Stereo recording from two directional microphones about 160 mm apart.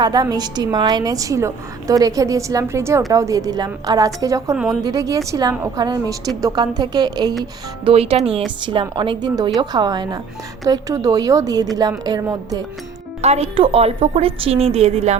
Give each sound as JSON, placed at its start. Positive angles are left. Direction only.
{"t": 0.0, "sound": "a woman's voice", "side_deg": -25}
{"t": 4.5, "sound": "a woman's voice", "side_deg": 0}
{"t": 4.8, "sound": "a woman's voice", "side_deg": -25}
{"t": 7.9, "sound": "a woman's voice", "side_deg": -35}
{"t": 13.2, "sound": "a woman's voice", "side_deg": -40}